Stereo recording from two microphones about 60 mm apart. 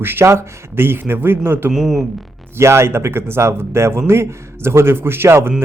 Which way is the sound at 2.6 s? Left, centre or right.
Right.